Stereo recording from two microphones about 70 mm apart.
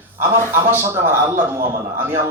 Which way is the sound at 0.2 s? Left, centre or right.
Right.